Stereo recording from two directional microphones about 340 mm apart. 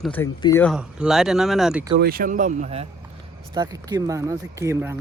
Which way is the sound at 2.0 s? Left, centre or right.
Right.